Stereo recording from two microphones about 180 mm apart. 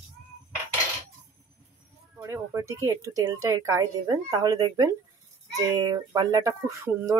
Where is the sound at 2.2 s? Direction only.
15° right (ahead or behind).